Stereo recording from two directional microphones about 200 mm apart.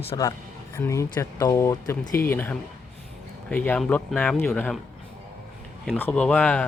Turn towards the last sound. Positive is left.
turn(degrees=5)  # may be behind; listen again after turning